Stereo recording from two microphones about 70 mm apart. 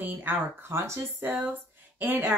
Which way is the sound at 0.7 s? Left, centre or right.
Right.